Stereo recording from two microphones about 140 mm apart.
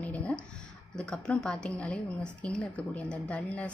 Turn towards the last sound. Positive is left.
turn(degrees=10)  # may be behind; listen again after turning